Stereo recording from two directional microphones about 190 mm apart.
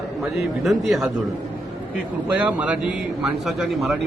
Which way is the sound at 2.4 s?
5° right (ahead or behind).